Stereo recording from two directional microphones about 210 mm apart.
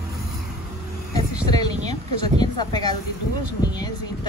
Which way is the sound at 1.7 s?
30° right (ahead or behind).